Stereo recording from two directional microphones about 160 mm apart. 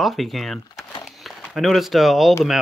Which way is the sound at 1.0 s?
Centre (ahead or behind).